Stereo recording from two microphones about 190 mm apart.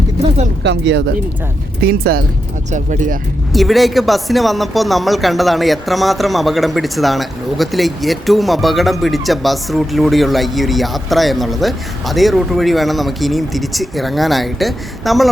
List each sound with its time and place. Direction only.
0.6 s speech: 65° right (ahead or behind)
1.8 s speech: 55° right (ahead or behind)
2.7 s speech: 40° right (ahead or behind)
3.5 s speech: centre (ahead or behind)